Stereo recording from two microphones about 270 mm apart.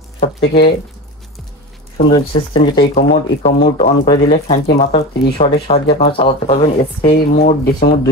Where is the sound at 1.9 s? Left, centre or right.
Centre.